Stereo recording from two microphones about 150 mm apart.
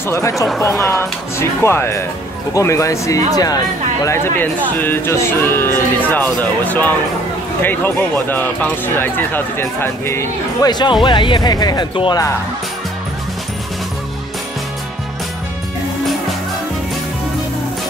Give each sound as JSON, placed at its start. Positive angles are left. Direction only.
{"t": 0.7, "sound": "speech", "side_deg": 20}